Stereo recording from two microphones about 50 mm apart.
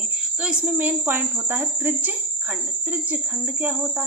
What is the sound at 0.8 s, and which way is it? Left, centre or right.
Speech, right.